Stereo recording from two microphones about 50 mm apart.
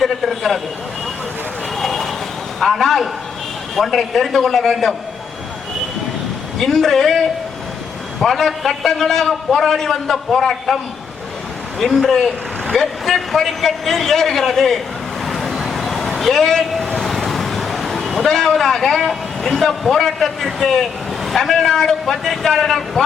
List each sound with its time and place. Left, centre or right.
0.0 s a sound: centre
1.7 s vehicle: centre
2.6 s a sound: centre
3.8 s a man's voice: centre
6.6 s a man's voice: centre
11.8 s a man's voice: centre
15.3 s vehicle: centre
15.5 s a sound: centre
16.9 s a man's voice: centre